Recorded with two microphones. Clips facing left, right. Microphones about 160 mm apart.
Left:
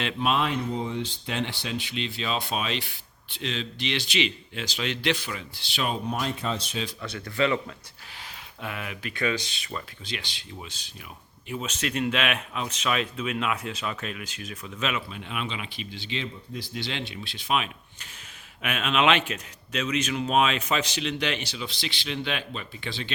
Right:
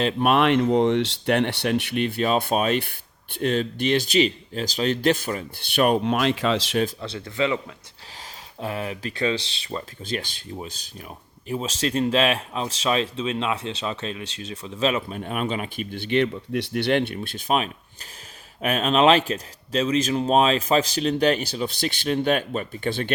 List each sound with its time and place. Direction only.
0.2 s speech: 60° right (ahead or behind); by 6.7 s 90° right
7.0 s speech: 25° right (ahead or behind)
8.6 s speech: 35° right (ahead or behind)
10.1 s speech: 45° right (ahead or behind)